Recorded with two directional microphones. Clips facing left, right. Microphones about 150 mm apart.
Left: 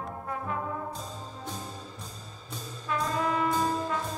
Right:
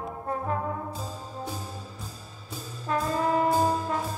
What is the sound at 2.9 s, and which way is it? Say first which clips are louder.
Brass instrument: right 3 dB; 40° right (ahead or behind).